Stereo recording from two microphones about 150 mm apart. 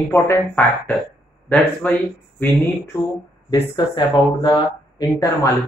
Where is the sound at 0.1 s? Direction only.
15° left (ahead or behind).